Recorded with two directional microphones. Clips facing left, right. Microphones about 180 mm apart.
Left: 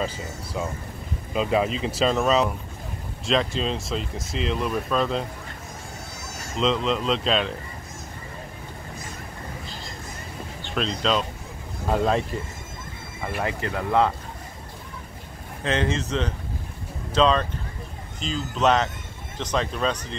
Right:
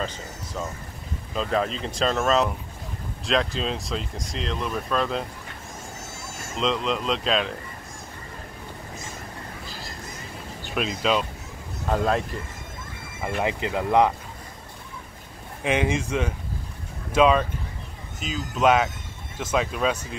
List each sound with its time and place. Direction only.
0.0 s speech: 10° left (ahead or behind)
6.5 s speech: centre (ahead or behind)
10.7 s speech: 5° right (ahead or behind)
13.4 s speech: 15° right (ahead or behind)
15.6 s speech: 10° right (ahead or behind)